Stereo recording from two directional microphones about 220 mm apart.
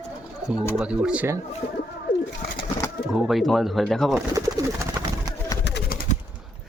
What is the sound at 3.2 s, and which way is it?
Speech, centre (ahead or behind).